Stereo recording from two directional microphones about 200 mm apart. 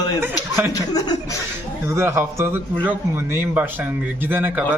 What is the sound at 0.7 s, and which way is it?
Speech, 20° left (ahead or behind).